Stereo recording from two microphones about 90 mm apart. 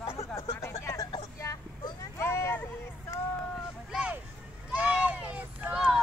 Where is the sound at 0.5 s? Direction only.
30° left (ahead or behind).